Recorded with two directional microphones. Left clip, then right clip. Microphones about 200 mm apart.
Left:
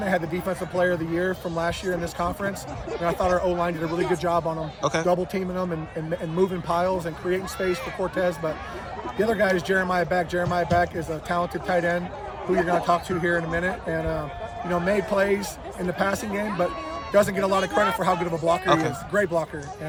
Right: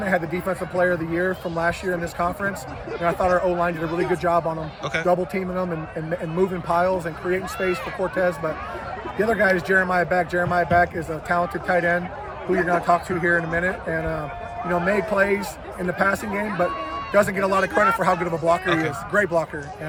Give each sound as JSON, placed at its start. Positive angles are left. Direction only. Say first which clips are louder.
{"t": 0.0, "sound": "speech", "louder": "right 2 dB", "side_deg": 5}
{"t": 18.6, "sound": "speech", "louder": "left 1 dB", "side_deg": 20}
{"t": 19.1, "sound": "speech", "louder": "right 3 dB", "side_deg": 0}